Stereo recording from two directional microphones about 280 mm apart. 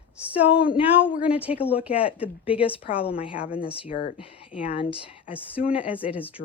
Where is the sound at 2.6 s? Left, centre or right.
Centre.